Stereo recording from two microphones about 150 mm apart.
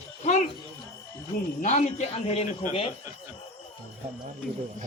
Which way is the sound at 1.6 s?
50° left (ahead or behind).